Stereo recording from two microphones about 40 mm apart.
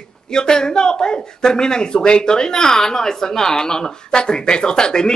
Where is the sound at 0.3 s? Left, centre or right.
Centre.